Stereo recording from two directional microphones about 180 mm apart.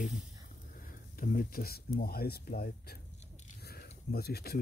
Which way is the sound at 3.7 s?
60° left (ahead or behind).